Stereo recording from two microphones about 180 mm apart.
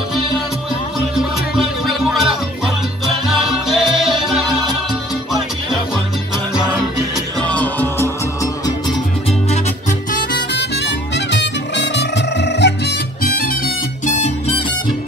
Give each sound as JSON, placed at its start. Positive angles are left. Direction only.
{"t": 1.1, "sound": "music", "side_deg": 0}
{"t": 7.4, "sound": "music", "side_deg": 10}
{"t": 9.5, "sound": "music", "side_deg": 45}
{"t": 10.5, "sound": "music", "side_deg": 70}
{"t": 14.0, "sound": "music", "side_deg": 40}